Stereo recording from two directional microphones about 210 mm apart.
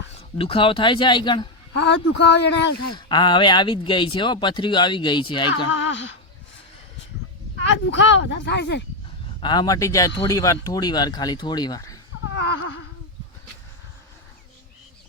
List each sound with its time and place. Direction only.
0.2 s speech: 25° left (ahead or behind)
1.7 s speech: 55° left (ahead or behind)
2.9 s speech: 20° left (ahead or behind)
5.6 s speech: 60° left (ahead or behind)
7.6 s speech: 60° left (ahead or behind)
9.4 s speech: 20° left (ahead or behind)
12.3 s a sound: 65° left (ahead or behind)